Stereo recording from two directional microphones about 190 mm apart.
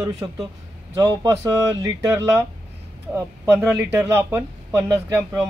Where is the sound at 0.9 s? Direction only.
20° right (ahead or behind).